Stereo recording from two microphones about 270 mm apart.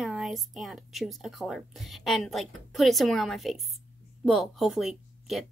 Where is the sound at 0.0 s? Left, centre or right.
Centre.